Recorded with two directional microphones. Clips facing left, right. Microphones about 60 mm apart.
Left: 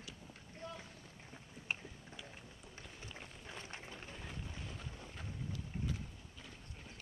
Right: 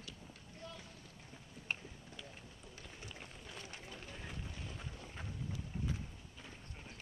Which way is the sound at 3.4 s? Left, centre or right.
Left.